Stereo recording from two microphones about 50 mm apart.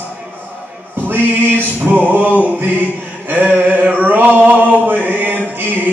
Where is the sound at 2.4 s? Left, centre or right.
Right.